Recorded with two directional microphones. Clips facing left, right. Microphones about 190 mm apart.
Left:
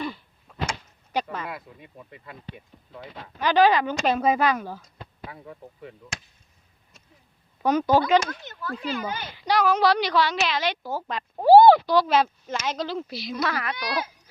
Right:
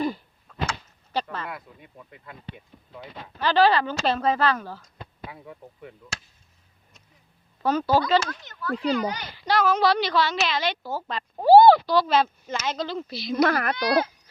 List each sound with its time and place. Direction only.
0.4 s power windows: 10° left (ahead or behind)
3.3 s a woman's voice: 15° left (ahead or behind)
5.3 s speech: centre (ahead or behind)
7.6 s a woman's voice: 15° left (ahead or behind)
13.3 s speech: 50° right (ahead or behind)